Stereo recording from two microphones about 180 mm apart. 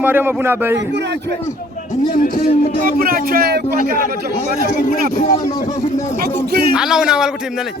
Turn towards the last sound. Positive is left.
turn(degrees=-5)  # may be behind; listen again after turning